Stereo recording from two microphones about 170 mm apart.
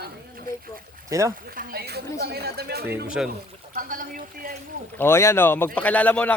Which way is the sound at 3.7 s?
55° right (ahead or behind).